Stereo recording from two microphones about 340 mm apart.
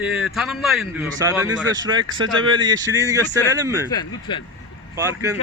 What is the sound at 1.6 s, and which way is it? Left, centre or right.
Speech, right.